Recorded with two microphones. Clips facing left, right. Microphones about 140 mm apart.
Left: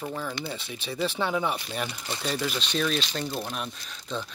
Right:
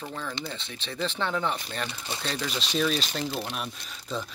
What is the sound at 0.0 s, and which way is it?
Speech, 10° left (ahead or behind).